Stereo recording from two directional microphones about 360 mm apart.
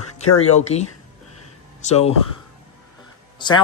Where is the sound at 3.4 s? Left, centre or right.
Centre.